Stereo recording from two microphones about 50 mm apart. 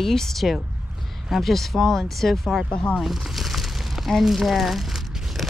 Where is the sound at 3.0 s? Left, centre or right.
Centre.